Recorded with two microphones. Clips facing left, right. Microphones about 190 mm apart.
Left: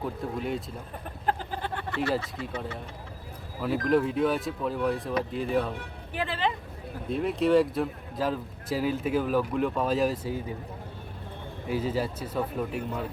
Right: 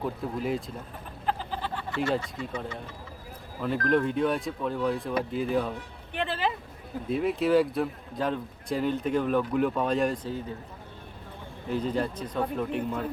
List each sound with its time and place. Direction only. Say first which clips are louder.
0.2 s speech: even; centre (ahead or behind)
1.3 s a sound: left 1 dB; 55° left (ahead or behind)
2.1 s speech: even; centre (ahead or behind)
6.1 s a sound: even; centre (ahead or behind)
7.1 s speech: even; centre (ahead or behind)
11.7 s speech: even; 5° left (ahead or behind)